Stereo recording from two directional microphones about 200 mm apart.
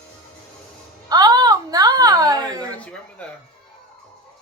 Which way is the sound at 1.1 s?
20° right (ahead or behind).